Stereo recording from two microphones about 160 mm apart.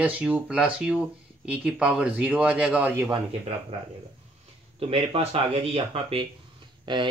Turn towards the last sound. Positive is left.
turn(degrees=-30)  # may be behind; listen again after turning